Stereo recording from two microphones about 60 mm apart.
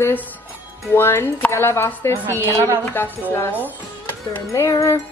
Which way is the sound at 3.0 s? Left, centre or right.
Left.